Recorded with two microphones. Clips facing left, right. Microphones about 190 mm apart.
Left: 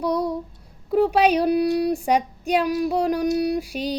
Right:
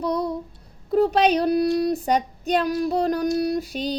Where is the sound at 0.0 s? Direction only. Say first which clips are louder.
Left 1 dB; 10° left (ahead or behind).